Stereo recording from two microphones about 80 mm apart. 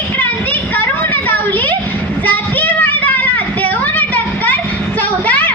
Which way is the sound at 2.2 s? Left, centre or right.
Left.